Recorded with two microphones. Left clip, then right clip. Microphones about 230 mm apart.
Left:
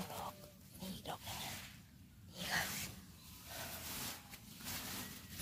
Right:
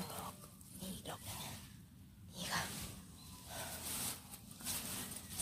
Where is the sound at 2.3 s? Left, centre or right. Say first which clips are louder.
Left 2 dB; centre.